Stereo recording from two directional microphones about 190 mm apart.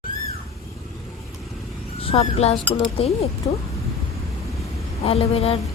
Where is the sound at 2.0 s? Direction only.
30° left (ahead or behind).